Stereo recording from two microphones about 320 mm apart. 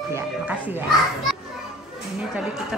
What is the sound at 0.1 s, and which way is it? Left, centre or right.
Speech, centre.